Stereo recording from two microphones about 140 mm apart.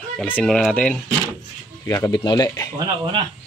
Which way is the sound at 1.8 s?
25° left (ahead or behind).